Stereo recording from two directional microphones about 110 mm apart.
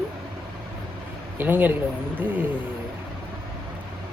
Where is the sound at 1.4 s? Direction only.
15° right (ahead or behind).